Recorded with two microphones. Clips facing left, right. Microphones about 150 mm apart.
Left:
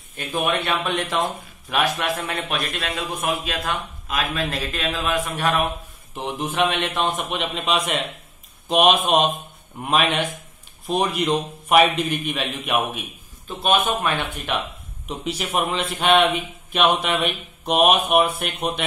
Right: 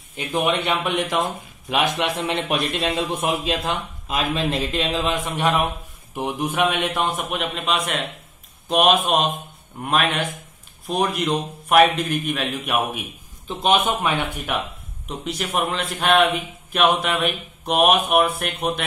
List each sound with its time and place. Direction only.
0.1 s a man's voice: 20° right (ahead or behind); by 13.0 s centre (ahead or behind)
13.5 s a man's voice: 15° right (ahead or behind)
15.0 s a man's voice: centre (ahead or behind)